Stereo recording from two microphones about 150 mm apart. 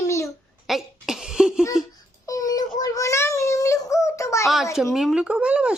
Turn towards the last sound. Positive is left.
turn(degrees=-5)  # may be behind; listen again after turning